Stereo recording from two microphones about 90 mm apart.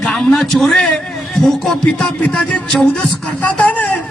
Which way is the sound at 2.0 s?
15° left (ahead or behind).